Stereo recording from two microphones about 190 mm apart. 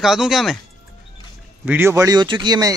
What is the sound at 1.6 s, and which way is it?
Speech, 10° right (ahead or behind).